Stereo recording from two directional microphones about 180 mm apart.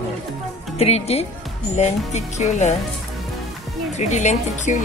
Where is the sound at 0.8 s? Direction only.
35° left (ahead or behind).